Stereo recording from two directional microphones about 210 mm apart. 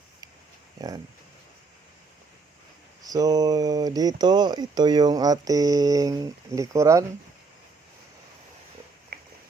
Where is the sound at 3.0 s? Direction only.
15° right (ahead or behind).